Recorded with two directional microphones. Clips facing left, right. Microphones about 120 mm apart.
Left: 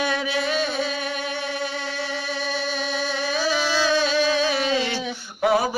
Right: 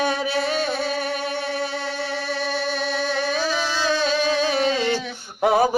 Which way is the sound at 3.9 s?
35° right (ahead or behind).